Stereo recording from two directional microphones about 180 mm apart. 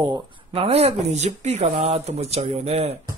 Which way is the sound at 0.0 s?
25° right (ahead or behind).